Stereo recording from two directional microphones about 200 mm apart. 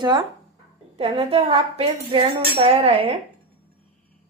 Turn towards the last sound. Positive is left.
turn(degrees=-30)  # may be behind; listen again after turning